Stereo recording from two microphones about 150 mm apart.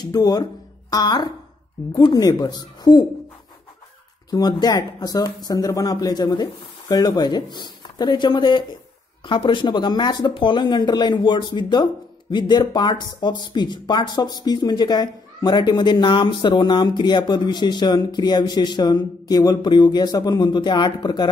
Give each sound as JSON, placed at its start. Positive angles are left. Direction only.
{"t": 0.0, "sound": "speech", "side_deg": 25}
{"t": 4.3, "sound": "speech", "side_deg": 25}